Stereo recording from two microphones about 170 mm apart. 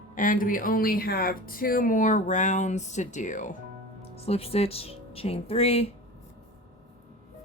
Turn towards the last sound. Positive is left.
turn(degrees=35)  # may be behind; listen again after turning